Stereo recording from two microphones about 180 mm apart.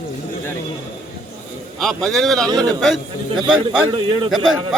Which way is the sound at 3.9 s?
25° right (ahead or behind).